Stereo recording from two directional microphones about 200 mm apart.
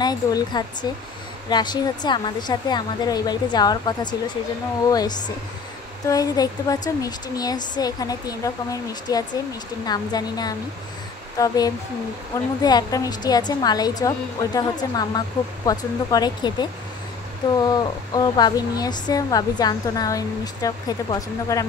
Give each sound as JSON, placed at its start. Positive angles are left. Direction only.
{"t": 0.0, "sound": "a woman's voice", "side_deg": 20}